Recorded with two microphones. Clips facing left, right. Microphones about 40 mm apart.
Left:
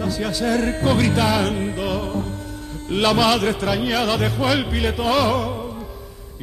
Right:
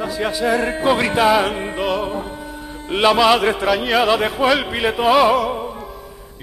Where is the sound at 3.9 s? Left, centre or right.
Right.